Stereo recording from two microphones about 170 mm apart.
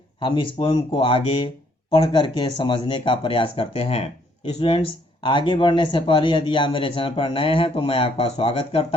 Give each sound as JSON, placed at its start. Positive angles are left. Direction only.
{"t": 0.2, "sound": "speech", "side_deg": 30}